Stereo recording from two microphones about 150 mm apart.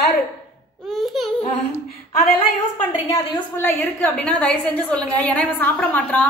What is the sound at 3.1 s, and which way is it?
A woman's voice, 20° left (ahead or behind).